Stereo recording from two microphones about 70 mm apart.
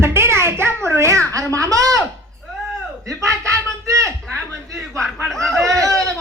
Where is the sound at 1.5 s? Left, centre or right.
Right.